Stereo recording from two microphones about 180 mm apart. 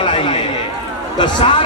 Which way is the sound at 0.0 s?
30° left (ahead or behind).